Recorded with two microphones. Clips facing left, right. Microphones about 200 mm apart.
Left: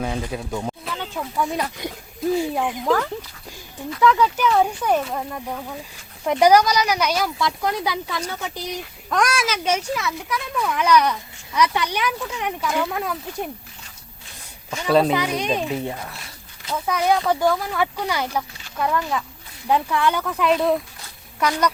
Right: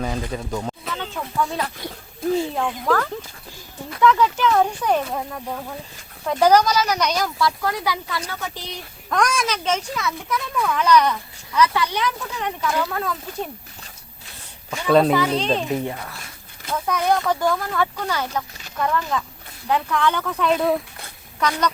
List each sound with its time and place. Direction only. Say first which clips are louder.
0.0 s a sound: even; 5° left (ahead or behind)
1.4 s speech: even; 15° left (ahead or behind)
4.0 s speech: right 1 dB; 5° left (ahead or behind)
6.2 s speech: left 1 dB; 15° left (ahead or behind)
7.3 s speech: right 1 dB; 20° left (ahead or behind)
14.8 s speech: right 2 dB; centre (ahead or behind)
15.1 s speech: right 2 dB; 15° left (ahead or behind)
16.8 s speech: left 1 dB; 5° left (ahead or behind)